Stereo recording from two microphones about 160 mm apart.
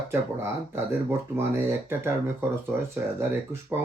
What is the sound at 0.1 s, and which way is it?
Speech, 15° right (ahead or behind).